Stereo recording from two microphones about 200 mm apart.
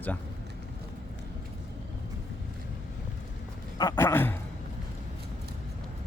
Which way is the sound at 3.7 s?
15° left (ahead or behind).